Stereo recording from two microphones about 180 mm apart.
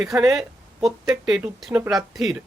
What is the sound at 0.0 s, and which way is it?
Speech, centre (ahead or behind).